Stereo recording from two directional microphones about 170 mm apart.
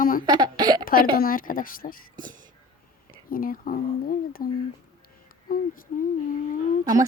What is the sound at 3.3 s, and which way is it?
Speech, 55° left (ahead or behind).